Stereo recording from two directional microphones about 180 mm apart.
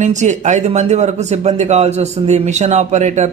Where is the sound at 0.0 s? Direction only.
40° right (ahead or behind).